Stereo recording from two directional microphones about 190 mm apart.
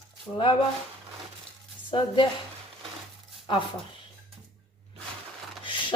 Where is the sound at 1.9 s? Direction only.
25° left (ahead or behind).